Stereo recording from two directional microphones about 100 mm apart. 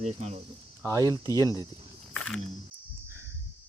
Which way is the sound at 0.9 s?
35° right (ahead or behind).